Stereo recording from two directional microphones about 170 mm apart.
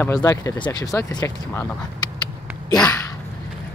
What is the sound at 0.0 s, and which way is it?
Speech, 20° left (ahead or behind).